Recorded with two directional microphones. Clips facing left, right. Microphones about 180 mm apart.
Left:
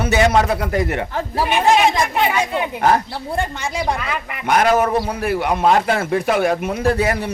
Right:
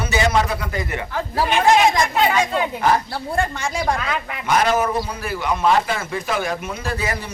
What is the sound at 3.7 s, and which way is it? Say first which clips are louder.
Speech: left 1 dB; 5° left (ahead or behind).